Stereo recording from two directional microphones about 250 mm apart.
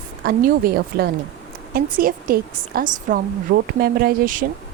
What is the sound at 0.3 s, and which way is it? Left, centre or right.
A woman's voice, right.